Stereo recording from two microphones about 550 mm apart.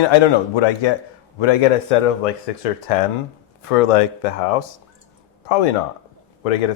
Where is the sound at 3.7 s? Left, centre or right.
Left.